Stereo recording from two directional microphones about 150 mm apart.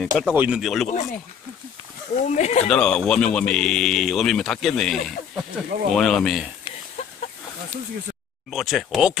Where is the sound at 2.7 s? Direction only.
5° left (ahead or behind).